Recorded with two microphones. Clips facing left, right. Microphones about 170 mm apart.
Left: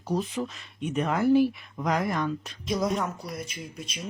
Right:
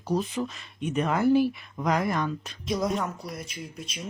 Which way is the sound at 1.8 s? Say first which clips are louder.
Right 1 dB; 45° right (ahead or behind).